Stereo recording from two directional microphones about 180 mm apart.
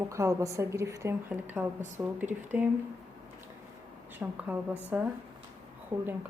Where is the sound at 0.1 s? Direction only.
15° right (ahead or behind).